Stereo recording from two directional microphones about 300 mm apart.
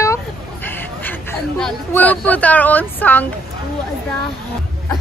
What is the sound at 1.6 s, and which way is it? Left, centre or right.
Speech, centre.